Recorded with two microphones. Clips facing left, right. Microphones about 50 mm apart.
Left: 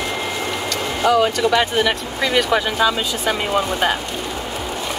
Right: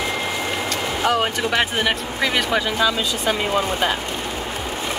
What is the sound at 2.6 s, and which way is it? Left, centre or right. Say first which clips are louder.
Speech: left 2 dB; left.